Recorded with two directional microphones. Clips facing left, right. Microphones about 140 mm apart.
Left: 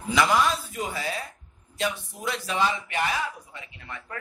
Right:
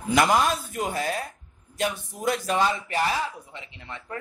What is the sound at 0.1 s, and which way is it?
Speech, 50° right (ahead or behind).